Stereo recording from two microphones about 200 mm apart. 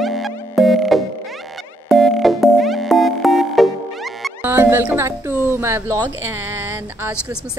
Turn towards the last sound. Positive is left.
turn(degrees=-10)  # may be behind; listen again after turning